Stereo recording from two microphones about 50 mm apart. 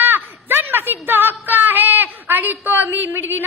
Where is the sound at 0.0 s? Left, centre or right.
Right.